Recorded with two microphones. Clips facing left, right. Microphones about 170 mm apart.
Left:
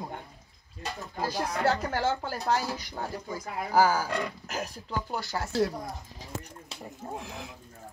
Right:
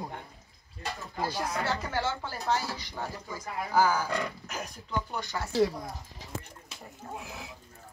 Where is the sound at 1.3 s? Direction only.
40° left (ahead or behind).